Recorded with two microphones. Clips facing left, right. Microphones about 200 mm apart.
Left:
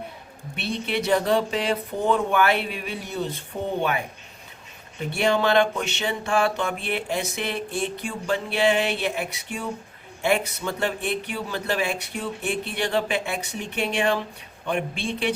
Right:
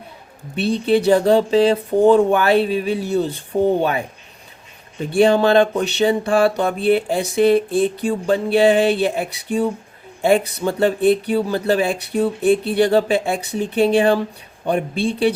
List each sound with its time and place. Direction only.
0.9 s speech: 30° right (ahead or behind)
5.2 s speech: 30° right (ahead or behind)